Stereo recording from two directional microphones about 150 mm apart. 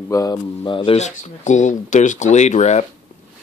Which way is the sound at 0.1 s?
25° left (ahead or behind).